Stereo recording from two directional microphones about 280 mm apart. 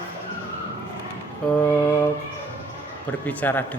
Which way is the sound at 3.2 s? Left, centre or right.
Centre.